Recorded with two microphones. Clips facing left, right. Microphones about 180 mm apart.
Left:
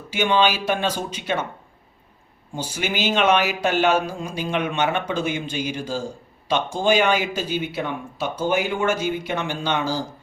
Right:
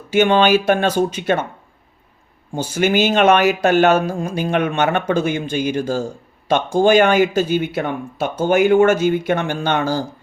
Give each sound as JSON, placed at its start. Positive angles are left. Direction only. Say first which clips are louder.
{"t": 0.1, "sound": "speech", "louder": "right 7 dB", "side_deg": -55}
{"t": 2.7, "sound": "speech", "louder": "right 8 dB", "side_deg": -50}